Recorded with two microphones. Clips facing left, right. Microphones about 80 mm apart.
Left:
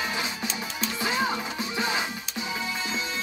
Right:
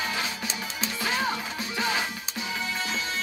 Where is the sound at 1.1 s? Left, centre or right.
Left.